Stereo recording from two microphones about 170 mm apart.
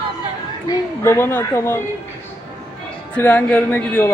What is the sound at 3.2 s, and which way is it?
Speech, 10° left (ahead or behind).